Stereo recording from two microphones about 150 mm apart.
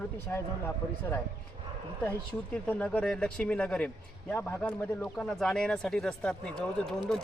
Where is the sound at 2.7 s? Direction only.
10° left (ahead or behind).